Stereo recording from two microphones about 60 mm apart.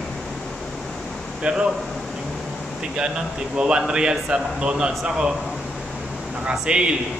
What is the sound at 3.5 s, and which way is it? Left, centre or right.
A man's voice, centre.